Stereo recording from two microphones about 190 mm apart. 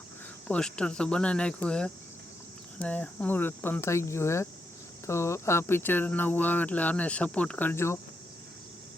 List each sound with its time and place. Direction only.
0.4 s speech: 5° left (ahead or behind)